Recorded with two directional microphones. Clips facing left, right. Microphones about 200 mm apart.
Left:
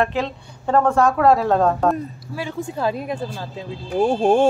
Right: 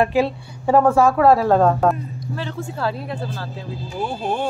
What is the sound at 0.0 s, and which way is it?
Speech, 10° right (ahead or behind).